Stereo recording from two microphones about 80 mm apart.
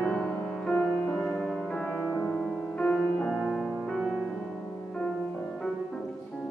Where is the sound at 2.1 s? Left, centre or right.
Left.